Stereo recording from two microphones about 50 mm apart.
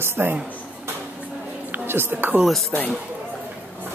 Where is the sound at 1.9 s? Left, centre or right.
Right.